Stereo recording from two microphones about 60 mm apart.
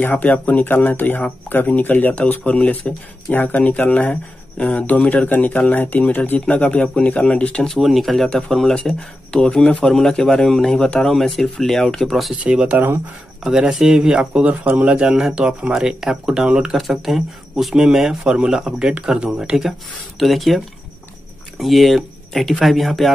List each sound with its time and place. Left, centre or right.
0.0 s speech: left
7.8 s speech: centre
12.4 s speech: right
13.4 s speech: centre
16.7 s speech: centre